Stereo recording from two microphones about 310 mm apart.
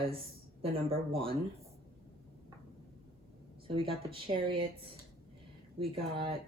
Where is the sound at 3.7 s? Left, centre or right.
Centre.